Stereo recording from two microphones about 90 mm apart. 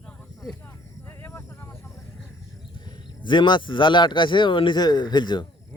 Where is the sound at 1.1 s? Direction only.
30° left (ahead or behind).